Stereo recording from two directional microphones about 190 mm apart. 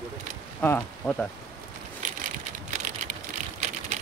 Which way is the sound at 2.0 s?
45° right (ahead or behind).